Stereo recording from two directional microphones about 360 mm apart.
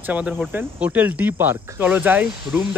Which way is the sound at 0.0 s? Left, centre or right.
Centre.